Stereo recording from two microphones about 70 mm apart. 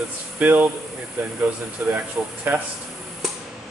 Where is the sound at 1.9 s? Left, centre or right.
Right.